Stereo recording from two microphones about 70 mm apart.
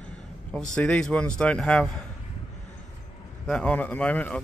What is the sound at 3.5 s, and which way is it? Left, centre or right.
Speech, centre.